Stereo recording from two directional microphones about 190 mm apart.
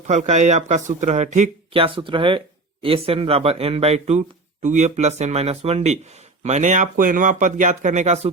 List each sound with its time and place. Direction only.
0.1 s speech: 35° right (ahead or behind)